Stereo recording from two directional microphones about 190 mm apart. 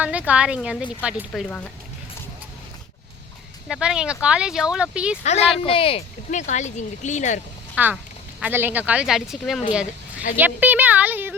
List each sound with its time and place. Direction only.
0.0 s a woman's voice: 5° right (ahead or behind)
3.7 s speech: 5° right (ahead or behind)
5.2 s speech: 35° left (ahead or behind)
7.8 s a woman's voice: 5° right (ahead or behind)
10.3 s a sound: 10° right (ahead or behind)